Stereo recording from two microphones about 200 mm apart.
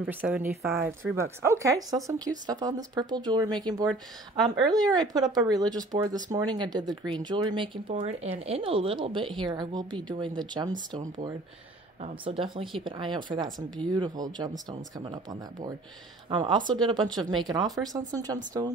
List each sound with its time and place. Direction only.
0.0 s speech: 10° right (ahead or behind)
12.0 s speech: 30° right (ahead or behind)
16.3 s speech: 25° right (ahead or behind)